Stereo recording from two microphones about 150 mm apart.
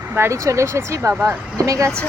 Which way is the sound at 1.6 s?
20° right (ahead or behind).